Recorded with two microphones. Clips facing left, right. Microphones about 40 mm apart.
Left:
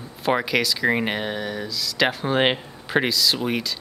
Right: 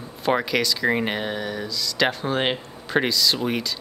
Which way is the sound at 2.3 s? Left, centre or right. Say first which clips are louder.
Left 3 dB; centre.